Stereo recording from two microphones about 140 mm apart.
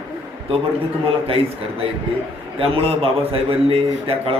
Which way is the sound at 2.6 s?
40° right (ahead or behind).